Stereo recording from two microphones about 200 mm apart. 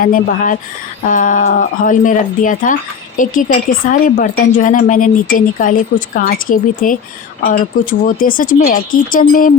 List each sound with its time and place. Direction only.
0.0 s a woman's voice: 45° left (ahead or behind)